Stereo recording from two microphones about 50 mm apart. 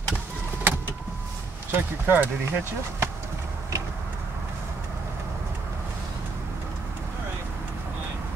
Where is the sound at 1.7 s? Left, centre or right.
Right.